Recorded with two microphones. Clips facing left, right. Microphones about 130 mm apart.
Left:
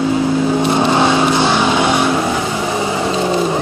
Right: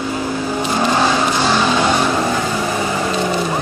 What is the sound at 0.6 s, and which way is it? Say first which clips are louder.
Vehicle: right 1 dB; 20° left (ahead or behind).